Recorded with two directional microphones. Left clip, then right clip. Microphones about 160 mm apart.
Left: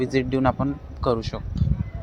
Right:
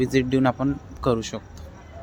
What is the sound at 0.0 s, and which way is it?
Speech, 20° right (ahead or behind).